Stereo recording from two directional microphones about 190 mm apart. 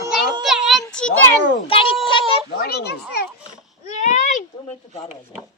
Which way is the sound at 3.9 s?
40° left (ahead or behind).